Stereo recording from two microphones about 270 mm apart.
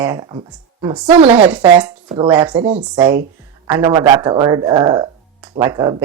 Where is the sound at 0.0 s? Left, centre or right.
Centre.